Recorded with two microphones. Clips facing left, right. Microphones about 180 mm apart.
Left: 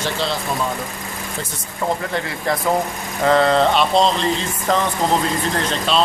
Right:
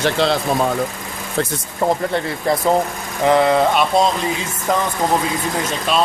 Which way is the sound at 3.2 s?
15° right (ahead or behind).